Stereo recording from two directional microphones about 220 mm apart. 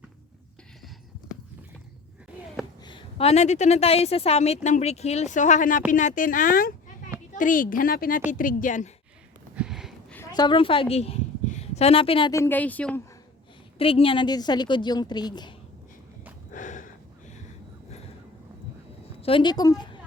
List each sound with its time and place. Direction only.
2.8 s a woman's voice: 25° left (ahead or behind)
9.6 s a sound: 5° right (ahead or behind)
10.2 s a woman's voice: 20° left (ahead or behind)
13.7 s a woman's voice: 25° left (ahead or behind)
16.5 s a sound: 35° left (ahead or behind)
19.2 s a woman's voice: 20° left (ahead or behind)